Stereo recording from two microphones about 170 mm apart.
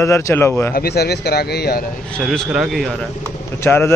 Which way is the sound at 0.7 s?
70° left (ahead or behind).